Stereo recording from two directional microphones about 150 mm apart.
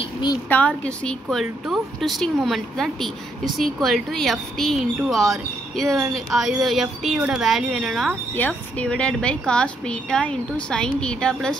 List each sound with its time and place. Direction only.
0.5 s a woman's voice: 10° left (ahead or behind)
8.4 s a woman's voice: 10° left (ahead or behind)